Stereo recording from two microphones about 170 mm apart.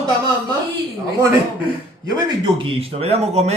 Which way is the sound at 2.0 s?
25° right (ahead or behind).